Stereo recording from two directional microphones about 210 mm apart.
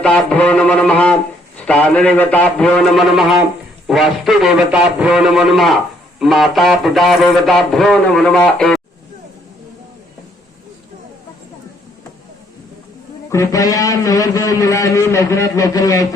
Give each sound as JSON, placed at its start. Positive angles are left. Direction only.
{"t": 0.0, "sound": "speech", "side_deg": 5}
{"t": 13.3, "sound": "a man's voice", "side_deg": 15}